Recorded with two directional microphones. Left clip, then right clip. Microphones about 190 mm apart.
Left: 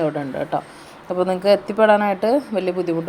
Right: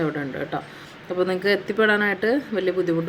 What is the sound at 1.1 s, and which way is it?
Speech, centre (ahead or behind).